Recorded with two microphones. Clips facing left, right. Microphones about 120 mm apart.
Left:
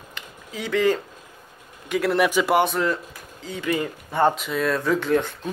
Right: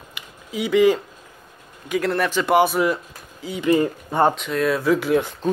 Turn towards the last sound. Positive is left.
turn(degrees=-5)  # may be behind; listen again after turning